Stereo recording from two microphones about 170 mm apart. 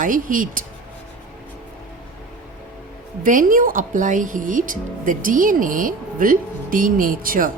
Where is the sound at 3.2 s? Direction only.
50° right (ahead or behind).